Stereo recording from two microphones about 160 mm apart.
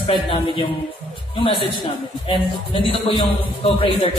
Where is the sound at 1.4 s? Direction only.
35° left (ahead or behind).